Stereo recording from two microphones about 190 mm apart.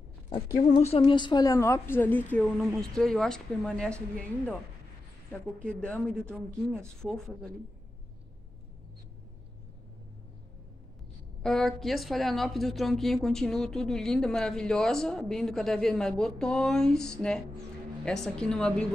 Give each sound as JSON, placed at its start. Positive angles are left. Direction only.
{"t": 0.6, "sound": "a woman's voice", "side_deg": 35}
{"t": 5.7, "sound": "a woman's voice", "side_deg": 5}
{"t": 6.3, "sound": "speech", "side_deg": -10}
{"t": 7.0, "sound": "a woman's voice", "side_deg": 0}
{"t": 11.4, "sound": "a woman's voice", "side_deg": 0}